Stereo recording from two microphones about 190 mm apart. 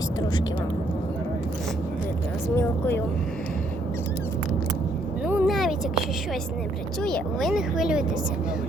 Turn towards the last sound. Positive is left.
turn(degrees=0)  # may be behind; listen again after turning